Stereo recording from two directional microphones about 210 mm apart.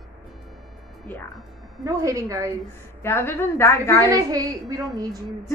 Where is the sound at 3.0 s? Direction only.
10° left (ahead or behind).